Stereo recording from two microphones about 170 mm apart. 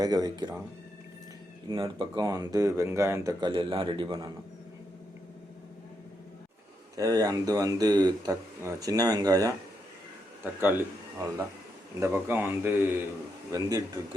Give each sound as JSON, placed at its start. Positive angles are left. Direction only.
{"t": 0.0, "sound": "a man's voice", "side_deg": -25}
{"t": 1.8, "sound": "a man's voice", "side_deg": -25}
{"t": 6.9, "sound": "a man's voice", "side_deg": -20}
{"t": 11.9, "sound": "a man's voice", "side_deg": -15}